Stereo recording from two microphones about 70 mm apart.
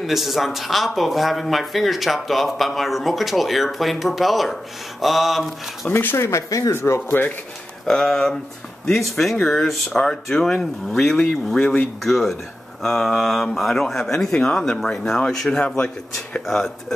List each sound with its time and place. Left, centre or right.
0.0 s speech: centre
5.9 s speech: left
7.8 s speech: centre
16.4 s speech: centre